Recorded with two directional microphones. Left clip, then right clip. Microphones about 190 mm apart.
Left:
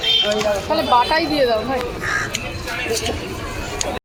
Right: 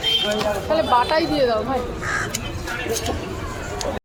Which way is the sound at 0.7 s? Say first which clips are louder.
Left 1 dB; 30° left (ahead or behind).